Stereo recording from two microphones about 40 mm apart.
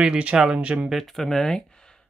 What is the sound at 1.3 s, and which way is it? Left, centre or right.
Speech, centre.